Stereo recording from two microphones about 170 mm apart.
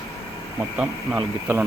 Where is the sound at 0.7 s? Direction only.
5° right (ahead or behind).